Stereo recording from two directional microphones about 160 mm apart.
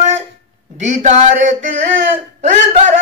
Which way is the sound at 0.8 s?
50° right (ahead or behind).